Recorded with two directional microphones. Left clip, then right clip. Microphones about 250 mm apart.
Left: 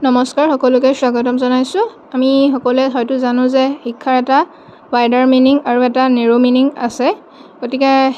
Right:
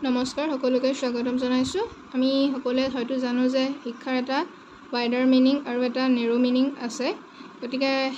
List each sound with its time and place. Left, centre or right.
0.0 s speech: left